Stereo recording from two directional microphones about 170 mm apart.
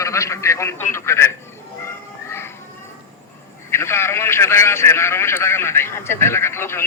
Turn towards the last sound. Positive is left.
turn(degrees=15)  # may be behind; listen again after turning